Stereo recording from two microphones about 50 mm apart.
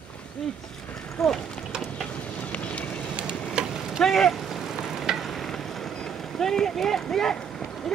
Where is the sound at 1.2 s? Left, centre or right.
Centre.